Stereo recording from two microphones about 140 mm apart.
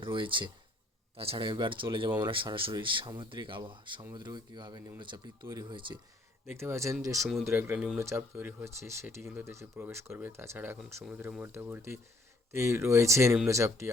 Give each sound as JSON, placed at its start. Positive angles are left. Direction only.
{"t": 0.0, "sound": "speech", "side_deg": -35}